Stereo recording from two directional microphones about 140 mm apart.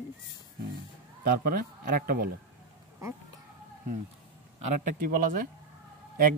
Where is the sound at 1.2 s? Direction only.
90° right.